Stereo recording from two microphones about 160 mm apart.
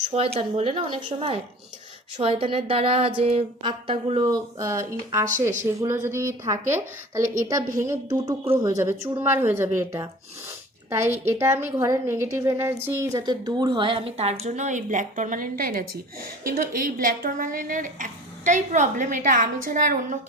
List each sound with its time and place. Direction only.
0.1 s a woman's voice: 40° right (ahead or behind); by 5.2 s 20° right (ahead or behind)
5.2 s speech: 50° right (ahead or behind)
5.8 s a woman's voice: 15° right (ahead or behind); by 20.1 s 60° right (ahead or behind)